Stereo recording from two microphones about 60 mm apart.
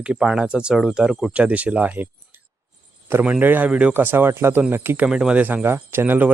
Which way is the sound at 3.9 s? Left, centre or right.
Right.